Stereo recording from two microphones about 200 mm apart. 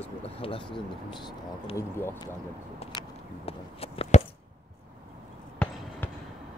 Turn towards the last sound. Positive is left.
turn(degrees=5)  # may be behind; listen again after turning